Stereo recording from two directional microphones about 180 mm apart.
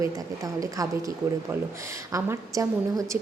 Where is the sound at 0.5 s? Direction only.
20° right (ahead or behind).